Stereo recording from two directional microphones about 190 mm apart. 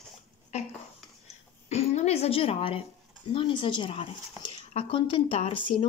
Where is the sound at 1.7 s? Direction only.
35° left (ahead or behind).